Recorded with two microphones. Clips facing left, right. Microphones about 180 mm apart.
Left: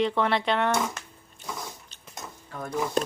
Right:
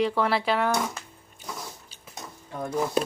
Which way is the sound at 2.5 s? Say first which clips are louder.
Right 4 dB; 20° right (ahead or behind).